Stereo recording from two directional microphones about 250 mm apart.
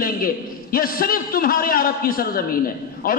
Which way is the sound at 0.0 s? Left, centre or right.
Left.